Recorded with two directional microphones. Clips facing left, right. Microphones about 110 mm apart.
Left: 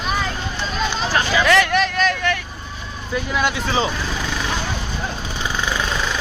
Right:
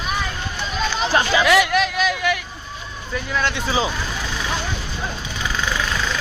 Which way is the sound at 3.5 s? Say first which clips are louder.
Left 1 dB; centre (ahead or behind).